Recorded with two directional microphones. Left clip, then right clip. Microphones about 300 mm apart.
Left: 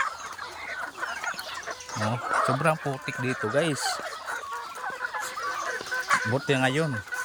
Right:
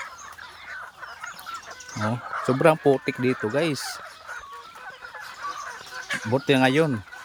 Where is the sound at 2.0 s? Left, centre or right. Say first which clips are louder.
Left 1 dB; centre.